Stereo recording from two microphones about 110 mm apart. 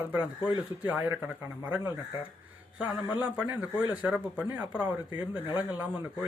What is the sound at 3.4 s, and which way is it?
Speech, 15° right (ahead or behind).